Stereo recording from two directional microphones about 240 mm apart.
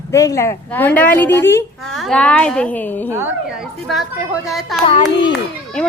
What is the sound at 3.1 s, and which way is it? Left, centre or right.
Speech, centre.